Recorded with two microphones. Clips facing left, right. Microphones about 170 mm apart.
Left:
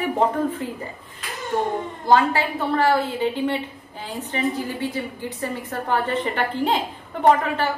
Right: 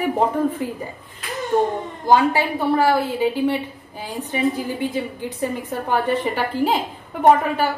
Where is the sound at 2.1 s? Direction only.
10° right (ahead or behind).